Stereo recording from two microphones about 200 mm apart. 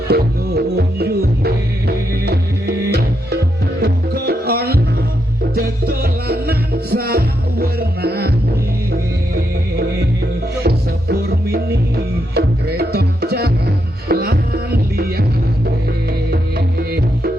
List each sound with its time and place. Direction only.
0.1 s music: 55° right (ahead or behind)
16.3 s music: 50° right (ahead or behind)